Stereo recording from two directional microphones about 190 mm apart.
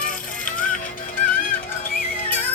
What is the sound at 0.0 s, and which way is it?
Music, 45° left (ahead or behind).